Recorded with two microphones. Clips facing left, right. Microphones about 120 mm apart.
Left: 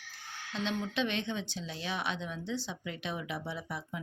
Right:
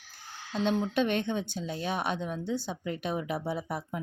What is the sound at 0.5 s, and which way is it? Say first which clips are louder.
Speech: right 6 dB; 40° right (ahead or behind).